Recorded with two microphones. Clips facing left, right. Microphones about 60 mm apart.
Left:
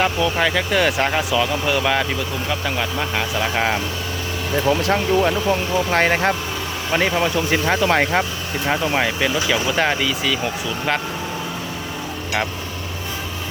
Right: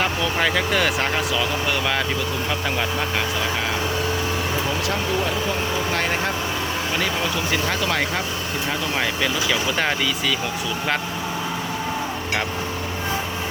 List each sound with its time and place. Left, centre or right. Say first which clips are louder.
0.0 s speech: left 3 dB; centre
5.9 s speech: left 9 dB; left
7.5 s speech: left 6 dB; left
9.0 s speech: left 3 dB; centre